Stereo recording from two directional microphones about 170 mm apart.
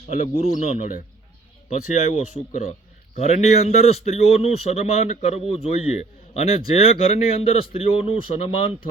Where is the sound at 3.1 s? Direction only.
40° left (ahead or behind).